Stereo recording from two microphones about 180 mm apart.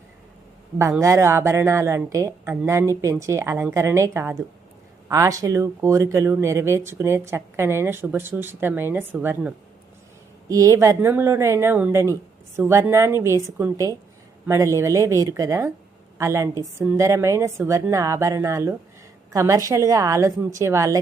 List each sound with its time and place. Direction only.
0.8 s speech: 15° right (ahead or behind)
10.5 s speech: 20° right (ahead or behind)